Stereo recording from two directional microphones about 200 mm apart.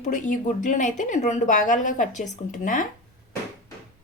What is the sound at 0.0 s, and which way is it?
A woman's voice, 40° left (ahead or behind).